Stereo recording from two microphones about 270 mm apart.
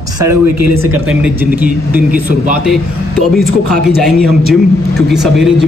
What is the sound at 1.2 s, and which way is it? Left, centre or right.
A man's voice, centre.